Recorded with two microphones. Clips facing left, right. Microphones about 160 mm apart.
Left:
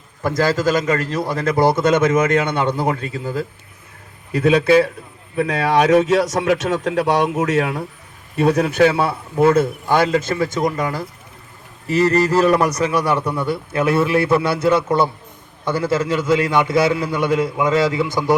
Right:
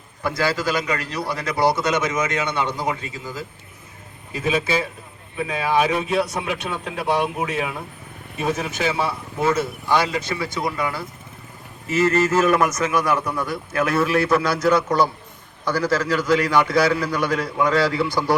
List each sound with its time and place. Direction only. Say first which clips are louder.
0.2 s speech: left 5 dB; 45° left (ahead or behind)
4.3 s a man's voice: left 8 dB; 70° left (ahead or behind); by 7.8 s 85° left
8.4 s a man's voice: left 10 dB; 65° left (ahead or behind); by 18.3 s 20° left (ahead or behind)